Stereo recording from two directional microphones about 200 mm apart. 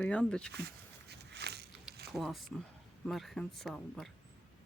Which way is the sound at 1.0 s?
55° right (ahead or behind).